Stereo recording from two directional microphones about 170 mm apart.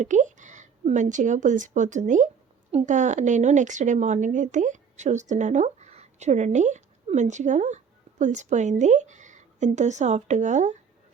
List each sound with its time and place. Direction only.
0.0 s a woman's voice: 45° right (ahead or behind)